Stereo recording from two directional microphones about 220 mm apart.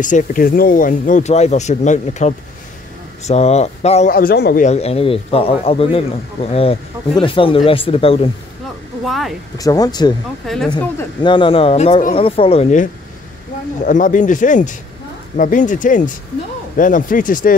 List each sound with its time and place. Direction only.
0.0 s speech: 35° left (ahead or behind)
4.1 s a man's voice: 45° left (ahead or behind)
4.6 s speech: 30° left (ahead or behind)
9.0 s speech: centre (ahead or behind)
9.6 s speech: 15° left (ahead or behind)
10.4 s speech: centre (ahead or behind)
11.2 s speech: 25° left (ahead or behind)
13.8 s speech: 35° left (ahead or behind)